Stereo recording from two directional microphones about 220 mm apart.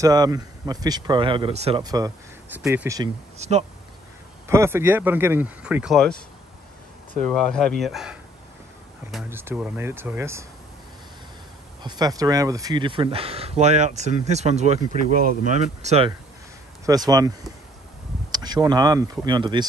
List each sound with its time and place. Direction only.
0.0 s speech: 15° right (ahead or behind)
1.8 s speech: 15° right (ahead or behind)
3.3 s speech: 30° right (ahead or behind)
4.5 s speech: 10° right (ahead or behind)
7.2 s speech: 5° left (ahead or behind)
11.8 s speech: 20° right (ahead or behind)
16.8 s speech: 15° right (ahead or behind)